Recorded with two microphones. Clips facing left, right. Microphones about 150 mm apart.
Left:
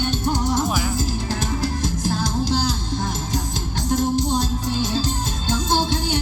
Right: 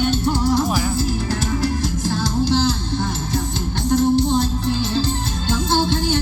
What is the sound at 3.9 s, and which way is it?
Music, 15° left (ahead or behind).